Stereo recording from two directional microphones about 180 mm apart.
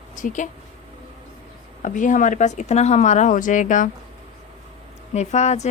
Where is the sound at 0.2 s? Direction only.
45° left (ahead or behind).